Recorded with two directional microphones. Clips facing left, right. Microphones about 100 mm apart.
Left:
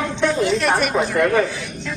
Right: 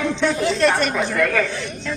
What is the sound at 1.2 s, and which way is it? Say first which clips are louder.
Speech: left 3 dB; 20° left (ahead or behind).